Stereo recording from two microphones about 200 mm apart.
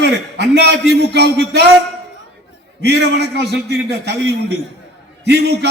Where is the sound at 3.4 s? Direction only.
60° right (ahead or behind).